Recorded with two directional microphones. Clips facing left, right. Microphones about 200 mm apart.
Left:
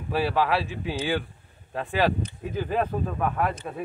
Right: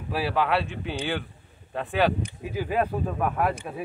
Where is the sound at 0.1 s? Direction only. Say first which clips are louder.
Left 1 dB; centre (ahead or behind).